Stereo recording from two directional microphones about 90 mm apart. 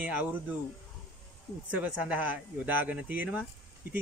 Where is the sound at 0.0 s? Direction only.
20° right (ahead or behind).